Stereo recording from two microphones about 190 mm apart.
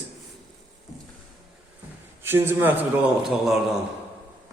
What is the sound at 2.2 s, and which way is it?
Speech, 10° right (ahead or behind).